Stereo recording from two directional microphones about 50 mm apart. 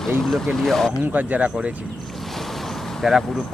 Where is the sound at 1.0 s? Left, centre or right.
Right.